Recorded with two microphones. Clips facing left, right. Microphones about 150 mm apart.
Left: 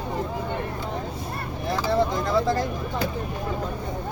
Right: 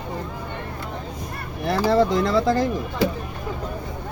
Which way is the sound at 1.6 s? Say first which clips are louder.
Right 5 dB; 90° right.